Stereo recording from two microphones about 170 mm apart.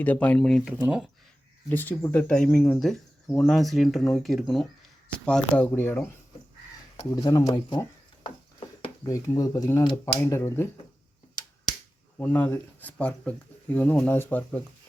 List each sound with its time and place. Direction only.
0.0 s speech: 10° left (ahead or behind)
1.7 s speech: 10° left (ahead or behind)
7.2 s speech: 20° left (ahead or behind)
12.1 s speech: 10° left (ahead or behind)